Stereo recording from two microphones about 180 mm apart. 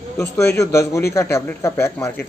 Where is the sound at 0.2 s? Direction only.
15° left (ahead or behind).